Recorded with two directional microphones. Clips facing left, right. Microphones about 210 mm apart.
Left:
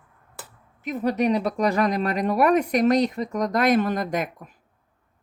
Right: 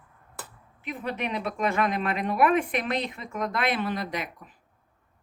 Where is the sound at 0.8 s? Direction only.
40° left (ahead or behind).